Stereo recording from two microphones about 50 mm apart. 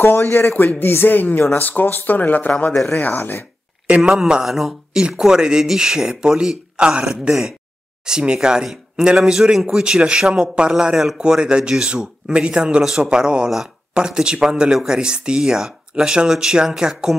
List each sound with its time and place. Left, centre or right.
0.1 s speech: left
3.2 s speech: left
3.8 s speech: right
4.1 s speech: centre